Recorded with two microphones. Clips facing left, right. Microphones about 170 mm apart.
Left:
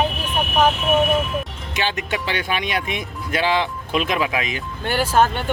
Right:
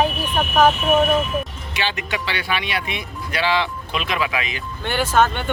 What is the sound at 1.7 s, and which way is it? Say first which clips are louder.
Speech: left 3 dB; 45° left (ahead or behind).